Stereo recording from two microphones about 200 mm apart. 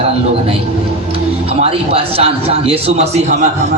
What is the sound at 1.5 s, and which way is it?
A man's voice, 30° right (ahead or behind).